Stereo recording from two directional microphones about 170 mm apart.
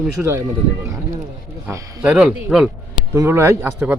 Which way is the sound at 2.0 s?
5° right (ahead or behind).